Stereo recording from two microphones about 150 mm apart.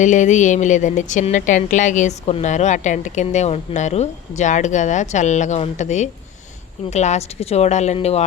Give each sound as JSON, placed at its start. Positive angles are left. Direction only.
{"t": 0.0, "sound": "a woman's voice", "side_deg": 55}